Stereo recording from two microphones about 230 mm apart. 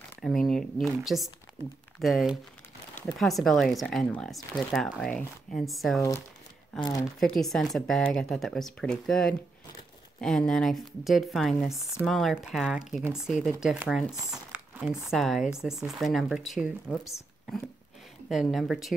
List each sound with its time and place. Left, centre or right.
0.2 s speech: centre
6.8 s speech: centre
7.2 s speech: centre
14.3 s crumpling: centre
15.0 s speech: centre
18.3 s speech: centre